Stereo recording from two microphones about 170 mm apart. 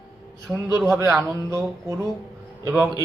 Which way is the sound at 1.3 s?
15° right (ahead or behind).